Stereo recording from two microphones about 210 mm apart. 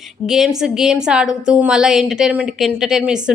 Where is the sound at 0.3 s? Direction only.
Centre (ahead or behind).